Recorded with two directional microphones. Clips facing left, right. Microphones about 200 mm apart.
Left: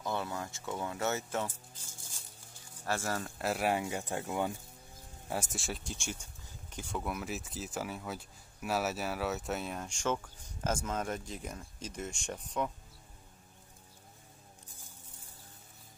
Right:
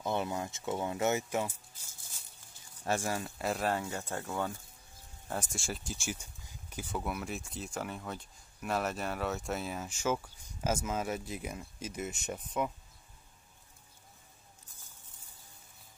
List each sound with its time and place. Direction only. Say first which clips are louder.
0.0 s speech: right 3 dB; 20° right (ahead or behind)
2.8 s speech: right 2 dB; 15° right (ahead or behind)
3.3 s speech: even; centre (ahead or behind)
3.6 s speech: left 1 dB; 15° left (ahead or behind); by 12.7 s 5° right (ahead or behind)